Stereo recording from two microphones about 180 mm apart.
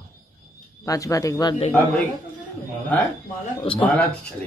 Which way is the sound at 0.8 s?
15° left (ahead or behind).